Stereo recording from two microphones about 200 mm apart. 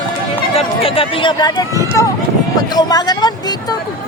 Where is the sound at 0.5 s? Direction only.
30° left (ahead or behind).